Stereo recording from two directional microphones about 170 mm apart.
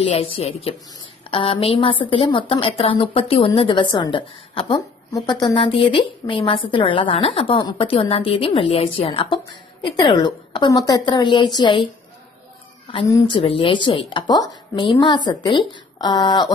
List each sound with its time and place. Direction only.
0.0 s a woman's voice: 35° left (ahead or behind)
13.3 s a woman's voice: 30° left (ahead or behind)